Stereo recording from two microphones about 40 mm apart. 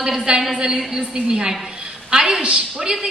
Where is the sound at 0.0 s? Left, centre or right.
Centre.